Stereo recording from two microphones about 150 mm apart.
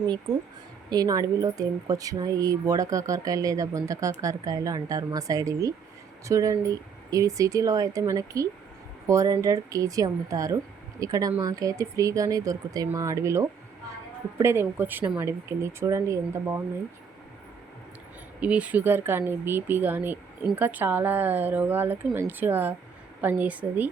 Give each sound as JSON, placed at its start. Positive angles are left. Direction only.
{"t": 0.9, "sound": "speech", "side_deg": -25}
{"t": 18.3, "sound": "speech", "side_deg": -10}